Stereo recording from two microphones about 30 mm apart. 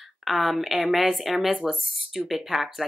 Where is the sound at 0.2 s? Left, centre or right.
Centre.